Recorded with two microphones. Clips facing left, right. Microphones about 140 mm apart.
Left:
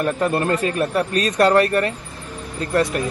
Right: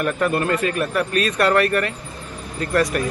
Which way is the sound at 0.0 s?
35° left (ahead or behind).